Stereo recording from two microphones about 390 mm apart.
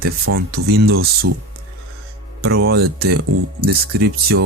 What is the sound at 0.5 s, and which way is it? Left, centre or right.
Speech, right.